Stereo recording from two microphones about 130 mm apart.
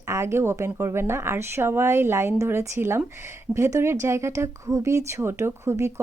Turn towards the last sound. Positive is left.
turn(degrees=-20)  # may be behind; listen again after turning